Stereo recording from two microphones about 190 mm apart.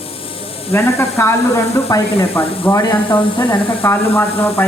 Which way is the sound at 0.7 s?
15° left (ahead or behind).